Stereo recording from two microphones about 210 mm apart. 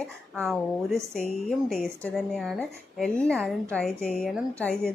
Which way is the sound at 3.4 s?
10° right (ahead or behind).